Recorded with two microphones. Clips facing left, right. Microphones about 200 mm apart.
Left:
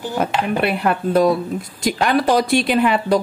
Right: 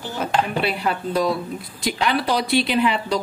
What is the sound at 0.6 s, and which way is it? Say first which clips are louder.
A woman's voice: left 4 dB; 55° left (ahead or behind).